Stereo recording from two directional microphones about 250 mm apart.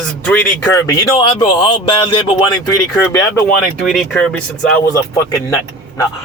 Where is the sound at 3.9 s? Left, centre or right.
Centre.